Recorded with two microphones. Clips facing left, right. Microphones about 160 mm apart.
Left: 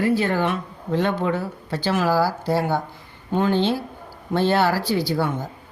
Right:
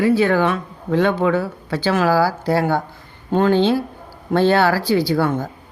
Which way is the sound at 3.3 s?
90° right.